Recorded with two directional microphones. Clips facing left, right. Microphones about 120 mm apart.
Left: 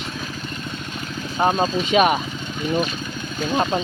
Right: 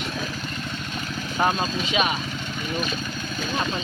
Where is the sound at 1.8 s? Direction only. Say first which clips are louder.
Left 8 dB; 50° left (ahead or behind).